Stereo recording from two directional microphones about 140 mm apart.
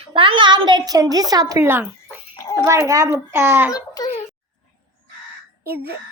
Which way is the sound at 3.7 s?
25° left (ahead or behind).